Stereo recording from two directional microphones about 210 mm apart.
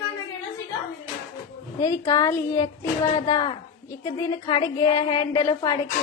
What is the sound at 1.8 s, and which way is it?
A woman's voice, 15° left (ahead or behind).